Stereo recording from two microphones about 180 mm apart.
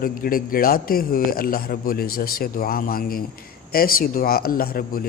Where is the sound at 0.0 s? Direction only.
55° left (ahead or behind).